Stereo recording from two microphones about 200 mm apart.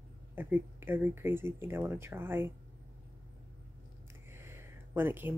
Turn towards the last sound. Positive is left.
turn(degrees=-10)  # may be behind; listen again after turning